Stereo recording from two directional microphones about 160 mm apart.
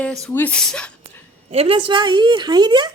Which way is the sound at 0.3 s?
10° left (ahead or behind).